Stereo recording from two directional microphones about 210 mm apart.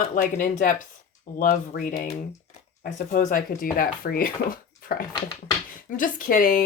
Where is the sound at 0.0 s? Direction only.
40° left (ahead or behind).